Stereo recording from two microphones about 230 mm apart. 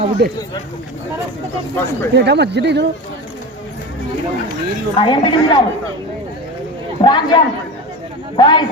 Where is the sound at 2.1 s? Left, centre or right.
Right.